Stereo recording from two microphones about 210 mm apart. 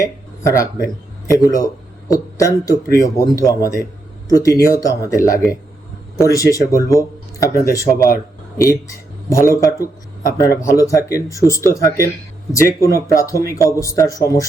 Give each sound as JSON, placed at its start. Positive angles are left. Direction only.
{"t": 0.0, "sound": "speech", "side_deg": 15}
{"t": 10.4, "sound": "speech", "side_deg": 45}
{"t": 10.7, "sound": "speech", "side_deg": 15}